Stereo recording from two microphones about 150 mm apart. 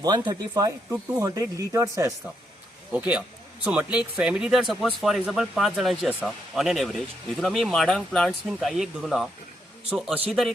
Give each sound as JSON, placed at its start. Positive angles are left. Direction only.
{"t": 0.0, "sound": "speech", "side_deg": -25}
{"t": 2.9, "sound": "a man's voice", "side_deg": -10}